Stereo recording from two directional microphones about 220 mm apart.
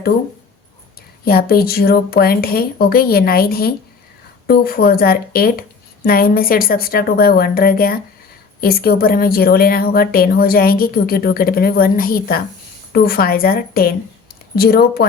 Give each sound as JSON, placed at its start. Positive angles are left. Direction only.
{"t": 1.2, "sound": "speech", "side_deg": 45}